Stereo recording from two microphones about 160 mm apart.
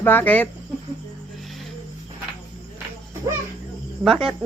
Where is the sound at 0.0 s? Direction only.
10° left (ahead or behind).